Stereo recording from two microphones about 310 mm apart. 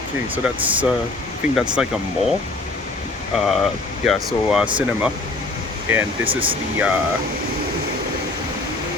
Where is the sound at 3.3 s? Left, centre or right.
Centre.